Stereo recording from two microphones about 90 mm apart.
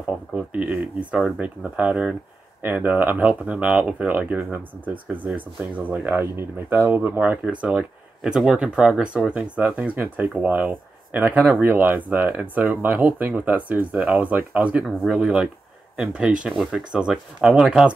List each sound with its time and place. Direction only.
0.3 s speech: 10° right (ahead or behind)
7.6 s speech: 10° right (ahead or behind)
14.9 s speech: centre (ahead or behind)